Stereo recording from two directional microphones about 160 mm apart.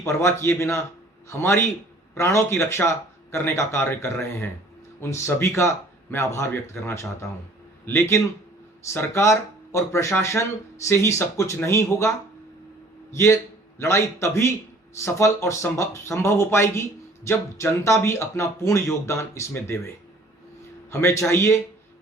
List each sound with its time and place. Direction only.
0.0 s a man's voice: 15° left (ahead or behind)
20.9 s speech: 15° left (ahead or behind)